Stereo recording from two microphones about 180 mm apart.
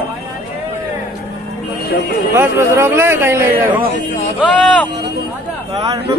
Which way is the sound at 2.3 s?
15° right (ahead or behind).